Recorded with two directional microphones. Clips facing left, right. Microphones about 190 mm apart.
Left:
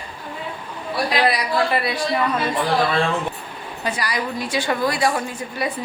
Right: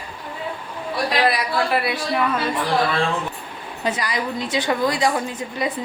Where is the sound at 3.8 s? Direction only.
20° right (ahead or behind).